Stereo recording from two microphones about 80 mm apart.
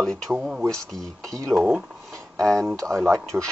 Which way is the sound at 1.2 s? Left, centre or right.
Right.